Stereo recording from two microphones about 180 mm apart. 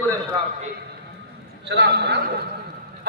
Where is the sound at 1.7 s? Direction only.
65° right (ahead or behind).